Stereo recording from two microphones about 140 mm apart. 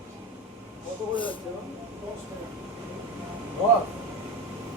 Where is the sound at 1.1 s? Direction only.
35° left (ahead or behind).